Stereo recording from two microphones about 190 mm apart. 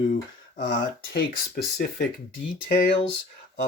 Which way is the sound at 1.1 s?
50° left (ahead or behind).